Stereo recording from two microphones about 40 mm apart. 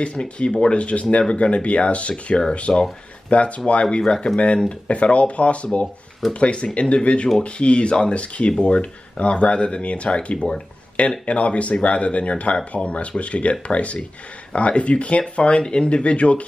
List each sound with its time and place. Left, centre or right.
0.0 s speech: left
2.7 s speech: centre
3.3 s speech: left
4.0 s speech: left